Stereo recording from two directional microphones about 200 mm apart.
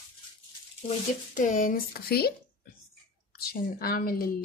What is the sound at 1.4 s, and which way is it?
Speech, 40° left (ahead or behind).